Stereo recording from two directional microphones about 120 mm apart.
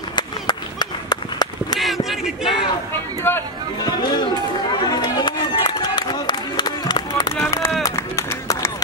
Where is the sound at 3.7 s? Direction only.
35° left (ahead or behind).